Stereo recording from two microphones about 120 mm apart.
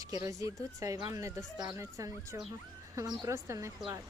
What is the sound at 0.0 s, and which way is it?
Speech, 30° right (ahead or behind).